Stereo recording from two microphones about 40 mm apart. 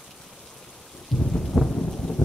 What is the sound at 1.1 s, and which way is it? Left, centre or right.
Thunder, centre.